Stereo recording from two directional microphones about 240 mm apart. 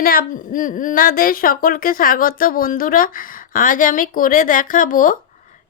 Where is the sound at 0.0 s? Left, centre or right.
Left.